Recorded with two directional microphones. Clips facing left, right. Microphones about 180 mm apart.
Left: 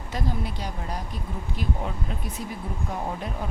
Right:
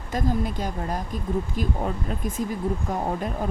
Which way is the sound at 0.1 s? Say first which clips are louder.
Right 5 dB; 45° right (ahead or behind).